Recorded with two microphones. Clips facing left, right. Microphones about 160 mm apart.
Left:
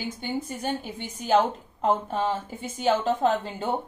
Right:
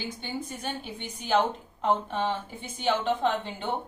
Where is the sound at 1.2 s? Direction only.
40° left (ahead or behind).